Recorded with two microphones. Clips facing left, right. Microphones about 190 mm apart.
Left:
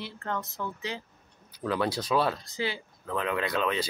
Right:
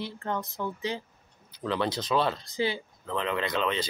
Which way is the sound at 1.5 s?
10° left (ahead or behind).